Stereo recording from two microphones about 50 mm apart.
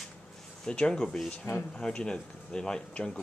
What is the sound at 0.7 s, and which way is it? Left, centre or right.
Speech, centre.